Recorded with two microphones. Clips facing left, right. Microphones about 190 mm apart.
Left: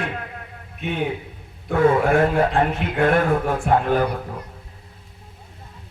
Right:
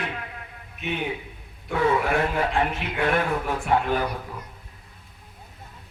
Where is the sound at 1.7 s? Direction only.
50° left (ahead or behind).